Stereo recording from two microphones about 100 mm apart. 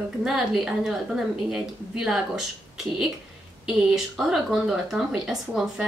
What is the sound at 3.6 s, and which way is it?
Speech, 5° right (ahead or behind).